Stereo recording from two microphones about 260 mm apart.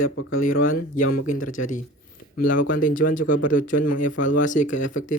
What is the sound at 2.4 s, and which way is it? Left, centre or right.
Speech, left.